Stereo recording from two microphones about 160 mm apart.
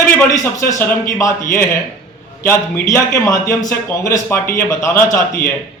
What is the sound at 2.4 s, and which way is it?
A man's voice, 15° left (ahead or behind).